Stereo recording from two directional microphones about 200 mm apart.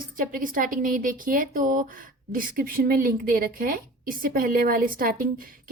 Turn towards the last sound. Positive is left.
turn(degrees=-45)  # may be behind; listen again after turning